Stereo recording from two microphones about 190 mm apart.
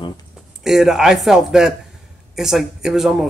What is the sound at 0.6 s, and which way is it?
Speech, centre (ahead or behind).